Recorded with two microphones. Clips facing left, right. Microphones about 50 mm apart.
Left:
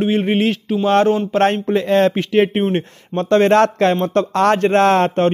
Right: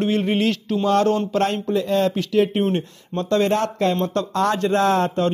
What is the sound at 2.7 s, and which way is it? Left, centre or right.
A man's voice, left.